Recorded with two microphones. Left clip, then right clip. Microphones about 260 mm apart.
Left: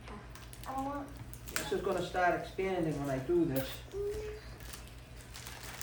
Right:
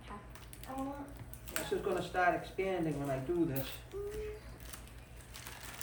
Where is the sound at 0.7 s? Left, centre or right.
Left.